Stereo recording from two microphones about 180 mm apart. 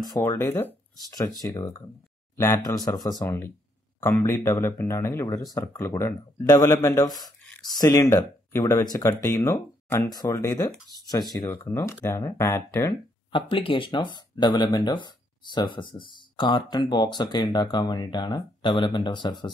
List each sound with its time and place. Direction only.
0.1 s speech: 15° left (ahead or behind)
13.3 s speech: 30° left (ahead or behind)